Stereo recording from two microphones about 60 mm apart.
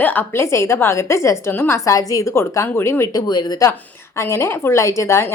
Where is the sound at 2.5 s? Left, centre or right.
Left.